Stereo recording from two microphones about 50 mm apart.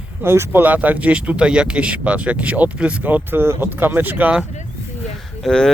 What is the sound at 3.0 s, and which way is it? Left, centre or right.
Speech, right.